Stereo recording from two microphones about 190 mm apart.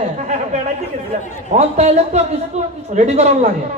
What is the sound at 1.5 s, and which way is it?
A man's voice, 35° right (ahead or behind).